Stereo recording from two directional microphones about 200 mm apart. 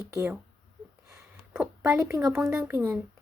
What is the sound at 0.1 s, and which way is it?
Speech, 15° right (ahead or behind).